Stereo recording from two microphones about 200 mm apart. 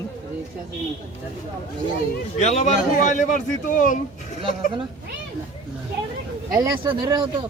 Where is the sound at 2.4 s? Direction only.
35° left (ahead or behind).